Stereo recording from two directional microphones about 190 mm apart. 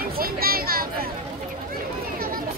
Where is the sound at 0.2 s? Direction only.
50° right (ahead or behind).